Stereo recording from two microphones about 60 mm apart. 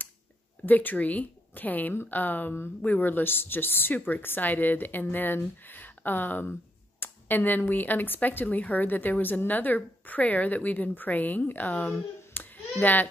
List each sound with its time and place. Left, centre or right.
0.7 s a woman's voice: left
12.4 s hands: left